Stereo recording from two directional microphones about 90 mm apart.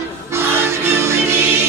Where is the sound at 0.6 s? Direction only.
30° right (ahead or behind).